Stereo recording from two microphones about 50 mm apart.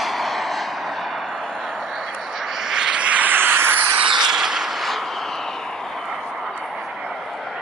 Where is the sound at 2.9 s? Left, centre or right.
Right.